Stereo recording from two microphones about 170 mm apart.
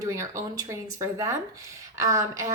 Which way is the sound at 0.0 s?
20° right (ahead or behind).